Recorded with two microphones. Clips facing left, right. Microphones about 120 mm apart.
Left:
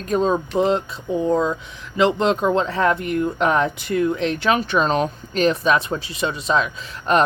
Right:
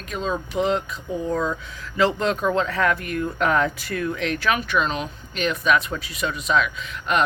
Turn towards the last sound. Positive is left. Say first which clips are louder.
# left 5 dB
turn(degrees=35)  # may be behind; listen again after turning